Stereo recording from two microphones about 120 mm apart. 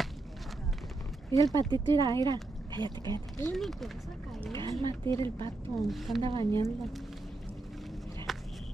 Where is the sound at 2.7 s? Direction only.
35° right (ahead or behind).